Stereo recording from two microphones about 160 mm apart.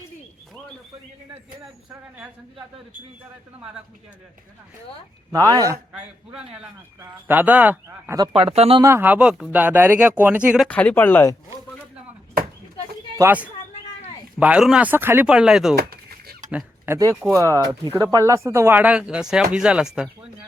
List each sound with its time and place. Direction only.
1.9 s speech: 10° right (ahead or behind)
5.3 s speech: 20° right (ahead or behind)
7.0 s speech: 10° right (ahead or behind)
8.4 s speech: 35° right (ahead or behind)
8.8 s speech: 15° right (ahead or behind)
10.7 s speech: 10° left (ahead or behind)
13.1 s speech: 10° right (ahead or behind)
15.8 s a sound: 75° right (ahead or behind)
16.5 s speech: 10° right (ahead or behind)